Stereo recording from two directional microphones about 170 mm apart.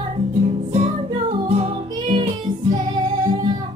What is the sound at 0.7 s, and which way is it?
Music, 40° right (ahead or behind).